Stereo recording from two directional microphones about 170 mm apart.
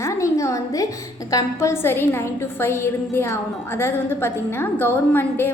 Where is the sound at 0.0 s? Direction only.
15° left (ahead or behind).